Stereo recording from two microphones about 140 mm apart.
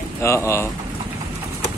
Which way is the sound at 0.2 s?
20° left (ahead or behind).